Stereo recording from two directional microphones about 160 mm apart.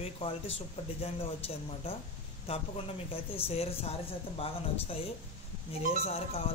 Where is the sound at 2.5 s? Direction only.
40° left (ahead or behind).